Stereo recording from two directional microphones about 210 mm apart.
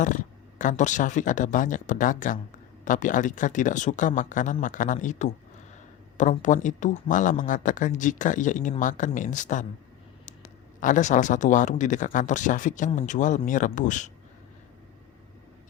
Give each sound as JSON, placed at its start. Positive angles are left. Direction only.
{"t": 0.0, "sound": "speech", "side_deg": 35}